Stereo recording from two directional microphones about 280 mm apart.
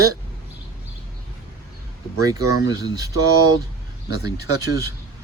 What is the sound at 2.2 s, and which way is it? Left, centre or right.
Speech, centre.